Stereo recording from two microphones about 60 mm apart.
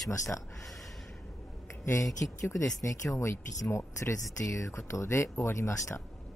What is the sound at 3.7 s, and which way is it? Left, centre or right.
Speech, left.